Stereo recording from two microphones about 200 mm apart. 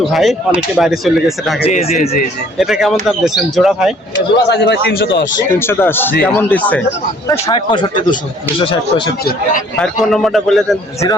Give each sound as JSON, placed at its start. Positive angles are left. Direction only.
{"t": 0.0, "sound": "a man's voice", "side_deg": 0}
{"t": 1.6, "sound": "speech", "side_deg": 30}
{"t": 1.9, "sound": "speech", "side_deg": 45}
{"t": 2.6, "sound": "a man's voice", "side_deg": 0}
{"t": 4.1, "sound": "a man's voice", "side_deg": 60}
{"t": 5.5, "sound": "a man's voice", "side_deg": 10}
{"t": 7.3, "sound": "speech", "side_deg": 20}
{"t": 9.2, "sound": "speech", "side_deg": 40}
{"t": 9.7, "sound": "a man's voice", "side_deg": 5}